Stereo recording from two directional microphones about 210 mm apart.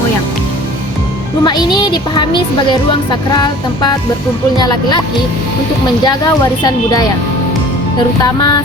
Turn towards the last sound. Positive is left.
turn(degrees=20)  # may be behind; listen again after turning